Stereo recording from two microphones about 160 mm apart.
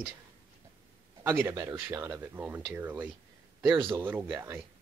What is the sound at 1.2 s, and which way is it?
Speech, 15° right (ahead or behind).